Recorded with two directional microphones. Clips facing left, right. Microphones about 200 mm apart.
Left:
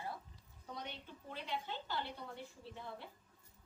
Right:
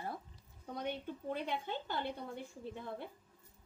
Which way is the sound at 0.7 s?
50° right (ahead or behind).